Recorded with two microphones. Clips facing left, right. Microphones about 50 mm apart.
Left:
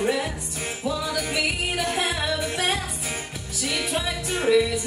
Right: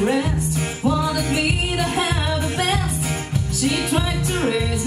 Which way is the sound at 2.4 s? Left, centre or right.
Right.